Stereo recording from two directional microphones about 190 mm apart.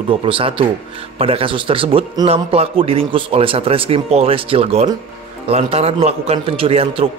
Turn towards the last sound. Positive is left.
turn(degrees=-30)  # may be behind; listen again after turning